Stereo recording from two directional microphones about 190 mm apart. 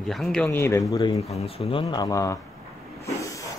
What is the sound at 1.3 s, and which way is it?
Speech, 35° left (ahead or behind).